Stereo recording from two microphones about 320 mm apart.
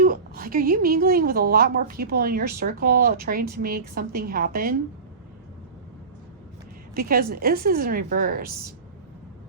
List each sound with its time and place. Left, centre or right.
0.0 s a woman's voice: right
6.9 s a woman's voice: right